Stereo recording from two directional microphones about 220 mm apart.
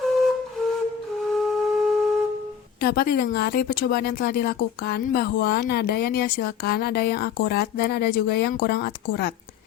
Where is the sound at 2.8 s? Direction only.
45° left (ahead or behind).